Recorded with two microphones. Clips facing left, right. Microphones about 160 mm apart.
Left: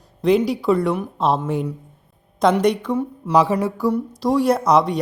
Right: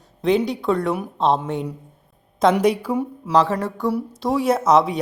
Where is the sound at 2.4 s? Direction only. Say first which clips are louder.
Even; 5° right (ahead or behind).